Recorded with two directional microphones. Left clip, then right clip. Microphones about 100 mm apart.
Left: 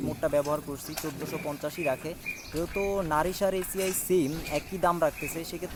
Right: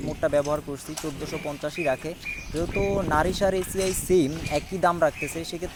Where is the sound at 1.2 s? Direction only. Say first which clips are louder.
Right 3 dB; 20° right (ahead or behind).